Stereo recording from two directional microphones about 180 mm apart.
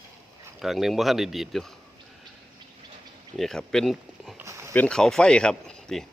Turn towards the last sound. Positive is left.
turn(degrees=5)  # may be behind; listen again after turning